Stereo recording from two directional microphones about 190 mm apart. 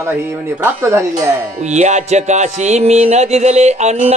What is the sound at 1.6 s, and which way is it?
Music, 40° right (ahead or behind).